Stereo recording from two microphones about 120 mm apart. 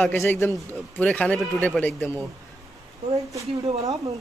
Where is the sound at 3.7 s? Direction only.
60° right (ahead or behind).